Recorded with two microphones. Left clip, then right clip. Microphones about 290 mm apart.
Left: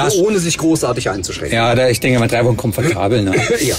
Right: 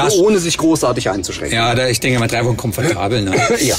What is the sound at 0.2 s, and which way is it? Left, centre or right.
Speech, right.